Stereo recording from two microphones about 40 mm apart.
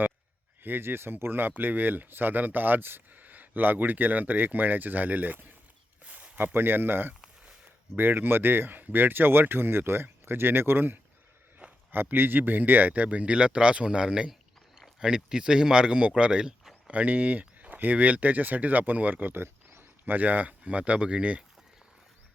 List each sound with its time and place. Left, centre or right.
0.6 s speech: right
3.2 s speech: right
6.1 s a sound: right
6.4 s speech: right
11.6 s a sound: right
12.1 s speech: right
16.9 s speech: right
19.4 s a sound: right
20.1 s speech: right